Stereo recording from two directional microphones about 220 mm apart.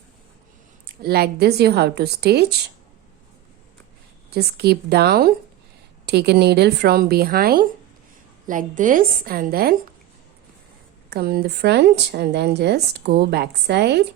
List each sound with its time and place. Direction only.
1.0 s speech: 45° right (ahead or behind)
4.3 s a woman's voice: 45° right (ahead or behind)
11.1 s speech: 45° right (ahead or behind)